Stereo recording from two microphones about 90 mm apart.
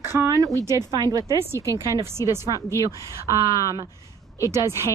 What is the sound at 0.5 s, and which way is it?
Speech, 35° left (ahead or behind).